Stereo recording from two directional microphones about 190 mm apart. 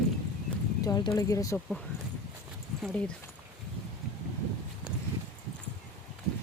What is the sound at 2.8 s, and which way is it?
Speech, 5° left (ahead or behind).